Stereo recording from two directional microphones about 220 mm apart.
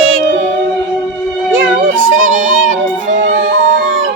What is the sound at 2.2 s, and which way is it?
Music, 35° right (ahead or behind).